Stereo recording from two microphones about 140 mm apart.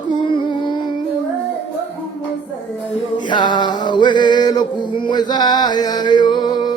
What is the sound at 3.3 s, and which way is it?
Male singing, 30° left (ahead or behind).